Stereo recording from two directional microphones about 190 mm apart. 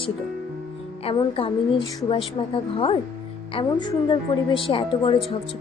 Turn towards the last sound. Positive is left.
turn(degrees=30)  # may be behind; listen again after turning